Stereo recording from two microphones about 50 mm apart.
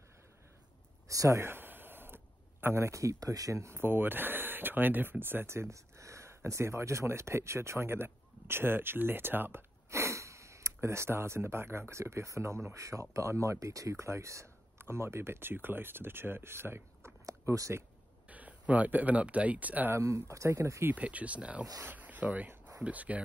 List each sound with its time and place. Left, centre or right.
1.0 s speech: right
1.4 s a sound: right
2.7 s speech: right
3.8 s speech: right
5.5 s speech: right
9.8 s sniff: right
11.9 s speech: right
14.8 s speech: right
17.3 s speech: right
18.3 s speech: right
20.1 s speech: right
20.9 s speech: right